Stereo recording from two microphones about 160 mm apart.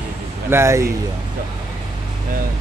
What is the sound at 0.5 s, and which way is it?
Speech, 15° right (ahead or behind).